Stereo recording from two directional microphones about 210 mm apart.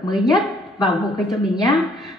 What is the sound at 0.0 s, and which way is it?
A woman's voice, centre (ahead or behind).